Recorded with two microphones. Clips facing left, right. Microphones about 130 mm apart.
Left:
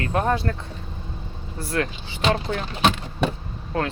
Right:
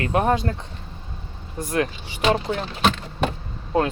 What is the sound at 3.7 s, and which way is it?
Speech, 20° right (ahead or behind).